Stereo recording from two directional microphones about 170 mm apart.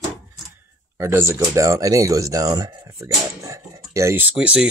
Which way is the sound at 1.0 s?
15° right (ahead or behind).